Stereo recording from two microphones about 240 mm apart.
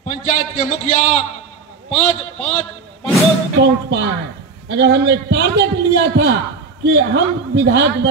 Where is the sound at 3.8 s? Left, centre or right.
Right.